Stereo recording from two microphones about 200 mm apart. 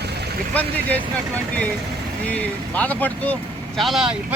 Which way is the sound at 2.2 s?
5° left (ahead or behind).